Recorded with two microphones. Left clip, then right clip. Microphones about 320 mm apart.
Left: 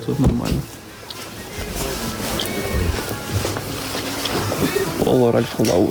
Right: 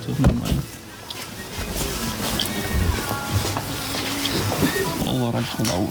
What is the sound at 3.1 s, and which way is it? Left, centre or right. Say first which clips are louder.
Music: left 1 dB; centre.